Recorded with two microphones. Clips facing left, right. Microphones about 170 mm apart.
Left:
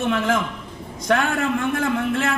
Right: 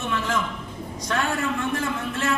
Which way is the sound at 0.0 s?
55° left (ahead or behind).